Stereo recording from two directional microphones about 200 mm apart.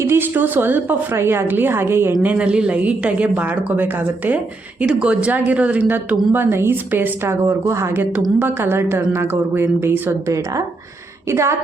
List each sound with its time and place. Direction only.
0.0 s speech: 10° right (ahead or behind)